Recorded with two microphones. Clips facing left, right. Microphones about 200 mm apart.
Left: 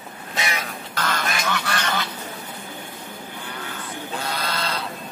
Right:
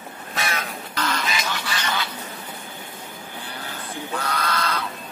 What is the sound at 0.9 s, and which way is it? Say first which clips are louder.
Duck: even; 50° left (ahead or behind).